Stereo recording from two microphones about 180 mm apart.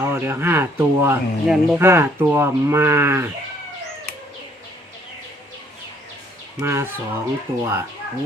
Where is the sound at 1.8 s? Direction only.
15° right (ahead or behind).